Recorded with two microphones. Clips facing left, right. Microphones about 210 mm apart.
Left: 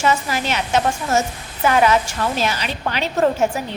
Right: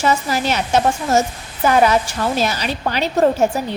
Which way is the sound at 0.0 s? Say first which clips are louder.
Right 2 dB; 40° right (ahead or behind).